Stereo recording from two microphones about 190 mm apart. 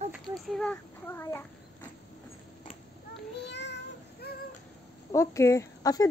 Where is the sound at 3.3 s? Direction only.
65° left (ahead or behind).